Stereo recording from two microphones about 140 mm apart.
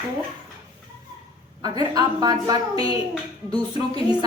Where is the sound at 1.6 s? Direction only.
30° right (ahead or behind).